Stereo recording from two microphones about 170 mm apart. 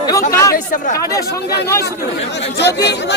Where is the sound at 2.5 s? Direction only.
90° left.